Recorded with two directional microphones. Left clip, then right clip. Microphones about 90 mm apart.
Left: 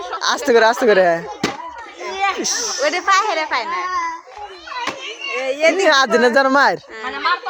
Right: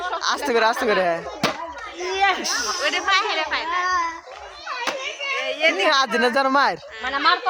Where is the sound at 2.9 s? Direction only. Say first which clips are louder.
Left 5 dB; 60° left (ahead or behind).